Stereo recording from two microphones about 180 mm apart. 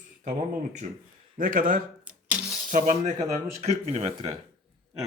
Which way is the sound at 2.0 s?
5° right (ahead or behind).